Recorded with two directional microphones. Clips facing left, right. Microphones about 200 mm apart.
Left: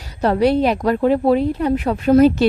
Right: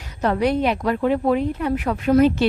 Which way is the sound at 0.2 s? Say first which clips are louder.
Left 4 dB; 35° left (ahead or behind).